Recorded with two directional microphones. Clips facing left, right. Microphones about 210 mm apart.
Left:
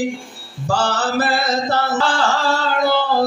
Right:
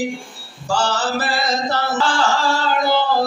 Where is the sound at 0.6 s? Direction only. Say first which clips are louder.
Left 1 dB; 60° left (ahead or behind).